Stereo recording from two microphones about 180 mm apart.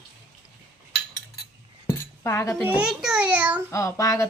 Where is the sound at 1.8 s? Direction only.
15° left (ahead or behind).